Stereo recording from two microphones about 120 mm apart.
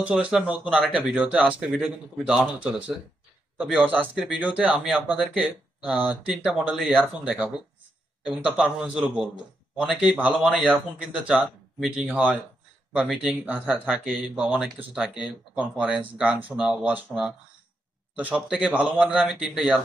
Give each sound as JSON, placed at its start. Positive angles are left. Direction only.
{"t": 0.0, "sound": "speech", "side_deg": -10}